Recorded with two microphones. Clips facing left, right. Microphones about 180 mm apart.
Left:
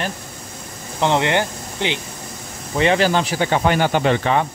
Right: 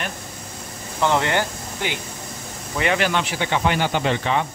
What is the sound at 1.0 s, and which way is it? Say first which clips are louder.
Speech: left 2 dB; 20° left (ahead or behind).